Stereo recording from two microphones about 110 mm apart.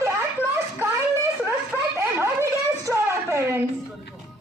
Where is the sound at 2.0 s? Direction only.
25° right (ahead or behind).